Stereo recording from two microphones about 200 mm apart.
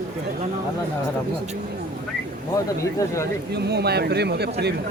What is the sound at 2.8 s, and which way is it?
Speech, 15° left (ahead or behind).